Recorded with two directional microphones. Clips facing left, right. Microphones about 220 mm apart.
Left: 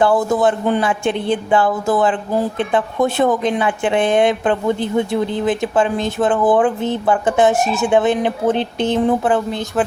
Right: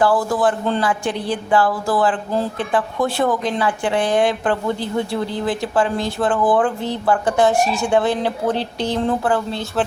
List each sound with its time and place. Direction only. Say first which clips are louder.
0.0 s speech: left 2 dB; 20° left (ahead or behind)